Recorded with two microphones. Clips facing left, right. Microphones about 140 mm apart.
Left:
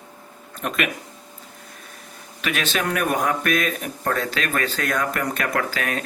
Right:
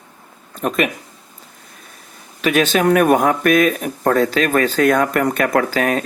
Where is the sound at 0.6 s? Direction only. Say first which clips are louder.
Right 7 dB; 40° right (ahead or behind).